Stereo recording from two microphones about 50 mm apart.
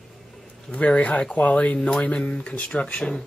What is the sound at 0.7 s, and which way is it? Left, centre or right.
Speech, left.